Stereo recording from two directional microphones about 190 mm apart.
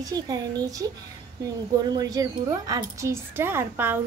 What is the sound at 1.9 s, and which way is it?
Speech, 20° right (ahead or behind).